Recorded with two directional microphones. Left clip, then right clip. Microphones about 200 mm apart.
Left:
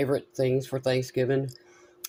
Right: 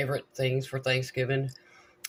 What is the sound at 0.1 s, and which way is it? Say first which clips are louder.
Speech: left 4 dB; 45° left (ahead or behind).